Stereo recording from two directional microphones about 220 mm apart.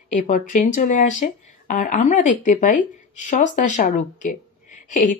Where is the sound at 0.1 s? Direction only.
35° left (ahead or behind).